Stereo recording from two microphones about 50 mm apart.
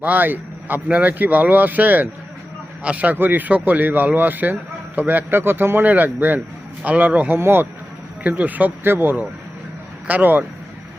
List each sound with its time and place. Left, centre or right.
0.0 s speech: right
7.3 s speech: right
8.2 s speech: right
8.8 s speech: right